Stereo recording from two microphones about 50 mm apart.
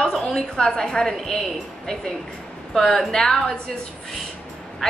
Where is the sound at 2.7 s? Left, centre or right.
Centre.